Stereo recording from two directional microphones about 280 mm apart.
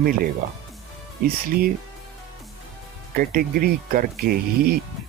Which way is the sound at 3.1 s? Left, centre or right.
Right.